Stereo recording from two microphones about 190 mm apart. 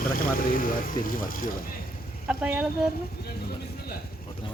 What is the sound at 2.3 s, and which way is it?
Speech, 5° right (ahead or behind).